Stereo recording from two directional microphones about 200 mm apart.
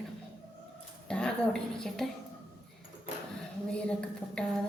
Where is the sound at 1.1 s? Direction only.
5° left (ahead or behind).